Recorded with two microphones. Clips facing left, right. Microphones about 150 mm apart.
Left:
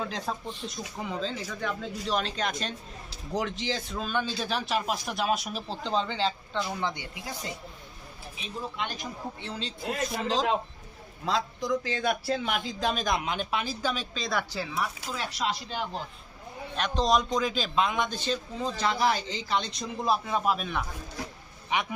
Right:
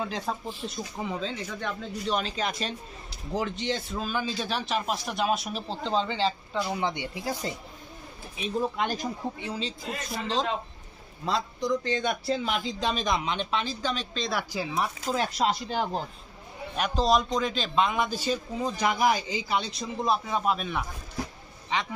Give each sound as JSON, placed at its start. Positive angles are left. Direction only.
{"t": 0.0, "sound": "a man's voice", "side_deg": 0}
{"t": 6.7, "sound": "speech", "side_deg": -20}
{"t": 8.8, "sound": "speech", "side_deg": -40}
{"t": 9.6, "sound": "a man's voice", "side_deg": 0}
{"t": 14.5, "sound": "speech", "side_deg": -15}
{"t": 15.1, "sound": "speech", "side_deg": -35}
{"t": 16.7, "sound": "a man's voice", "side_deg": -5}
{"t": 21.7, "sound": "a man's voice", "side_deg": 15}